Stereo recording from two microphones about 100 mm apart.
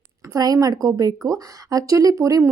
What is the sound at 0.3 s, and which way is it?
A woman's voice, 40° right (ahead or behind).